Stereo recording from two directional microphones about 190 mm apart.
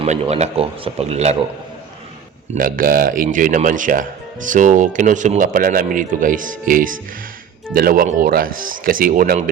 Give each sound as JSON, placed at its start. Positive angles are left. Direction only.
{"t": 0.0, "sound": "speech", "side_deg": -35}
{"t": 2.6, "sound": "speech", "side_deg": -50}